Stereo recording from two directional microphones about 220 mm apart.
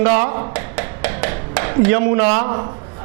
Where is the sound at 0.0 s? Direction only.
20° right (ahead or behind).